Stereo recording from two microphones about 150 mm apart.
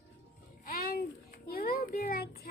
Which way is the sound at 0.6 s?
75° left (ahead or behind).